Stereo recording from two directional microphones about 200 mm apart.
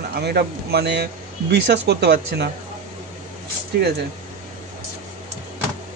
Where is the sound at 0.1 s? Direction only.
50° right (ahead or behind).